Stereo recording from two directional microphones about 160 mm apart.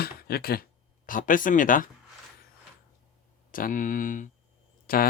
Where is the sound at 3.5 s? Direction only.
60° left (ahead or behind).